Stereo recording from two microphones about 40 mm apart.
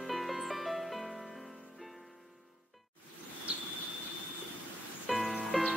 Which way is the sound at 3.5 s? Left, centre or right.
Right.